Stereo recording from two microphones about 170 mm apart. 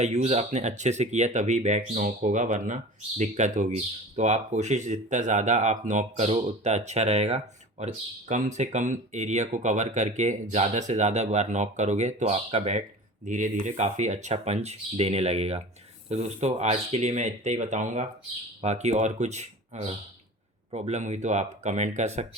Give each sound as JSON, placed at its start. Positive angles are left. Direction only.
{"t": 0.0, "sound": "speech", "side_deg": -40}